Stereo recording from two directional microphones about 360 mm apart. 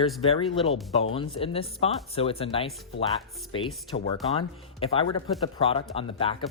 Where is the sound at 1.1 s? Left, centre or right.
Centre.